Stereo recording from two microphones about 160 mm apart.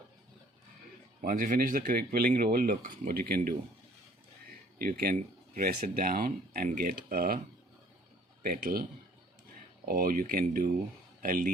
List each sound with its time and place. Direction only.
1.2 s speech: 60° right (ahead or behind)
4.8 s speech: 65° right (ahead or behind)
8.4 s speech: 65° right (ahead or behind)